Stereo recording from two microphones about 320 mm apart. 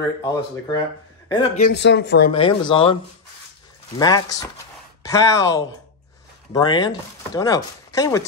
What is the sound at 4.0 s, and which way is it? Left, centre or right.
Speech, centre.